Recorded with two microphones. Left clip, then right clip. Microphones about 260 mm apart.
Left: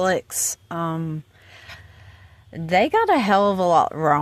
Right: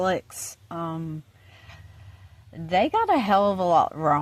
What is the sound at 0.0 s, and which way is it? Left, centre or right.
Speech, left.